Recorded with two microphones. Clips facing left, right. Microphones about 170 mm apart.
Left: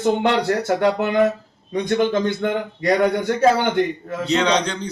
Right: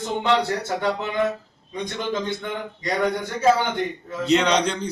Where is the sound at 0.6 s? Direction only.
65° left (ahead or behind).